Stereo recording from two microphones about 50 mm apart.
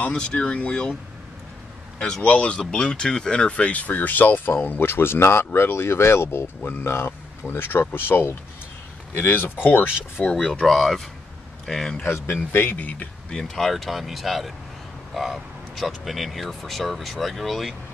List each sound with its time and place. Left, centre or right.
0.0 s speech: left
2.2 s speech: left
2.7 s speech: centre; by 9.8 s left
10.3 s speech: centre
12.0 s speech: left
13.3 s speech: centre